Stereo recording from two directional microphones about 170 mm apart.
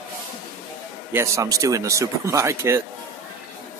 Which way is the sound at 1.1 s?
15° right (ahead or behind).